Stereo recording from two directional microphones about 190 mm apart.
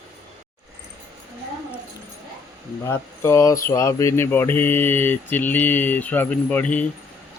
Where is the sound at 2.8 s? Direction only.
15° left (ahead or behind).